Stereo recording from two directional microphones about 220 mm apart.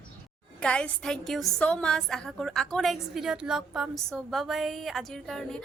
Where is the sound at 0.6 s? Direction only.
5° left (ahead or behind).